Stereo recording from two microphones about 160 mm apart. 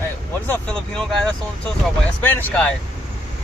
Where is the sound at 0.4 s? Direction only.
5° left (ahead or behind).